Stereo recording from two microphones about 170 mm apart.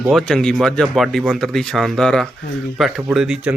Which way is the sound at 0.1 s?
Centre (ahead or behind).